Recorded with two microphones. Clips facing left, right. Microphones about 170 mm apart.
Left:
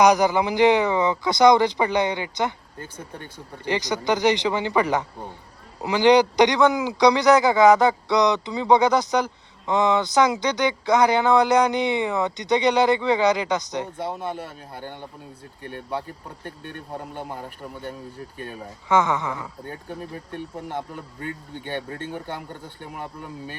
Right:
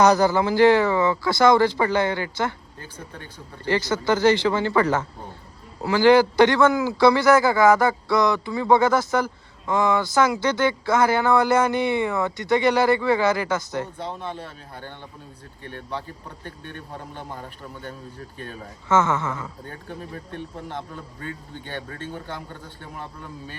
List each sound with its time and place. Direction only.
0.0 s speech: 15° left (ahead or behind)
3.7 s a man's voice: 15° left (ahead or behind)
20.7 s speech: 10° left (ahead or behind)
22.8 s speech: 15° left (ahead or behind)